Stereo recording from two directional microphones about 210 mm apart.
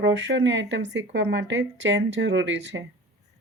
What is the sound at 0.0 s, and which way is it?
Speech, 55° right (ahead or behind).